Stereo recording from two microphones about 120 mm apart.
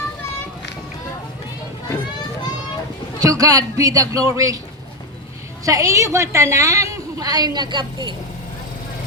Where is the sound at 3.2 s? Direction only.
30° right (ahead or behind).